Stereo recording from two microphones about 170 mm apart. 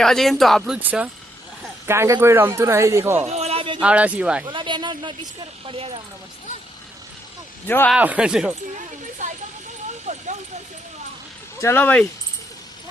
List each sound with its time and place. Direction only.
0.0 s speech: centre (ahead or behind)
0.8 s speech: 10° right (ahead or behind)
3.2 s a sound: 40° right (ahead or behind)
3.8 s speech: 10° right (ahead or behind)
4.4 s speech: 30° right (ahead or behind)
7.9 s speech: 10° right (ahead or behind)
9.2 s speech: 45° right (ahead or behind)
10.1 s a sound: 45° right (ahead or behind)
11.6 s speech: 10° left (ahead or behind)